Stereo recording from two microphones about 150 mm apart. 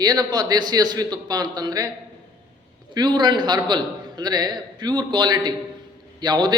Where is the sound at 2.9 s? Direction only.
30° right (ahead or behind).